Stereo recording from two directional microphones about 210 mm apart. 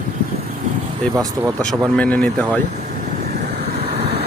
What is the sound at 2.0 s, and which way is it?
Speech, 5° left (ahead or behind).